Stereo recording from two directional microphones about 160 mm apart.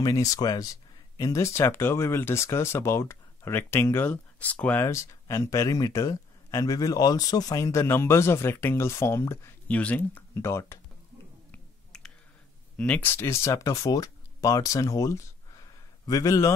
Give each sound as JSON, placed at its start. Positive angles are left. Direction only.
{"t": 0.0, "sound": "speech", "side_deg": 20}
{"t": 11.5, "sound": "clicking", "side_deg": 5}
{"t": 12.7, "sound": "speech", "side_deg": 10}